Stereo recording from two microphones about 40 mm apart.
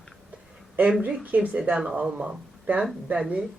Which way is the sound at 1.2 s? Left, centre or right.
Right.